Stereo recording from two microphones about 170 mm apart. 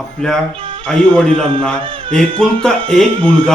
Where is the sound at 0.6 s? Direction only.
30° right (ahead or behind).